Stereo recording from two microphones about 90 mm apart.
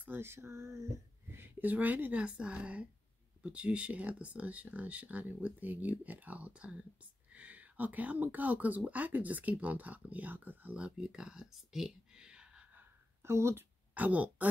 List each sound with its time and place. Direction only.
0.0 s a sound: 25° right (ahead or behind)
1.3 s speech: 20° right (ahead or behind)
13.2 s speech: 30° right (ahead or behind)
13.9 s speech: 15° right (ahead or behind)